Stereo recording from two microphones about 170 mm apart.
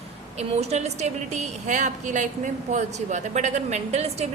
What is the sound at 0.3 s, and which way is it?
A woman's voice, 40° right (ahead or behind).